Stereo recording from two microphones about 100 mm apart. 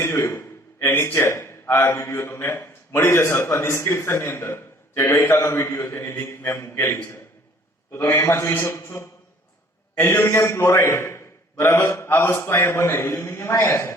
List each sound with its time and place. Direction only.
0.0 s a man's voice: 25° left (ahead or behind)